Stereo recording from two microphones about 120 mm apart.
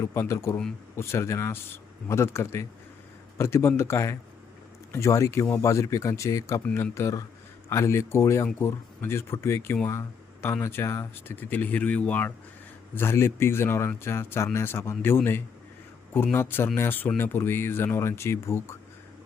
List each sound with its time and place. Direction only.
0.0 s speech: 20° left (ahead or behind)